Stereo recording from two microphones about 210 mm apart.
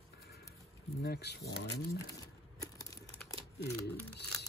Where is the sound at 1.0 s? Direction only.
50° left (ahead or behind).